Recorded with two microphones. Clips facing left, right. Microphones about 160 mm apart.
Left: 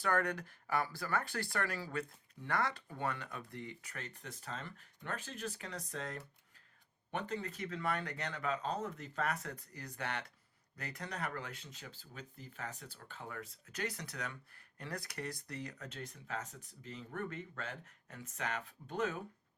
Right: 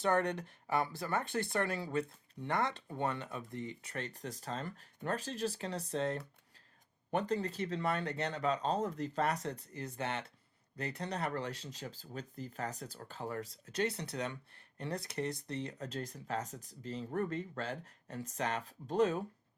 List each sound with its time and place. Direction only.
0.0 s speech: 25° right (ahead or behind)